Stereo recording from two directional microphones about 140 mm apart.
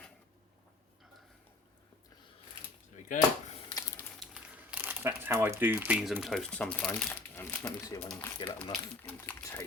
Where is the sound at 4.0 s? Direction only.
10° left (ahead or behind).